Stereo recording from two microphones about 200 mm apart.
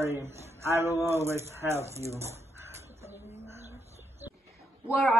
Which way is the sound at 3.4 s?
15° right (ahead or behind).